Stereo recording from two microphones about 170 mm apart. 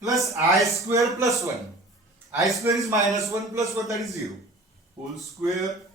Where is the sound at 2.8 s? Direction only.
20° right (ahead or behind).